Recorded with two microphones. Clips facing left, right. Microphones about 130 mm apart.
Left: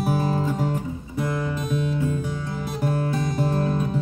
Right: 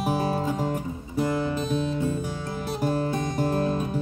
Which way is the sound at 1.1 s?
30° right (ahead or behind).